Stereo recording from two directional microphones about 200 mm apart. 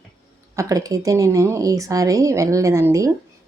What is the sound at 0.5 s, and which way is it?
A woman's voice, 15° right (ahead or behind).